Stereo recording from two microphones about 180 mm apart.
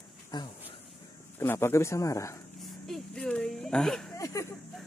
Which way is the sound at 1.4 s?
15° left (ahead or behind).